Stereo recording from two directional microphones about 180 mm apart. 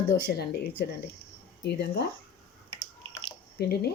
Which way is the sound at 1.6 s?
65° left (ahead or behind).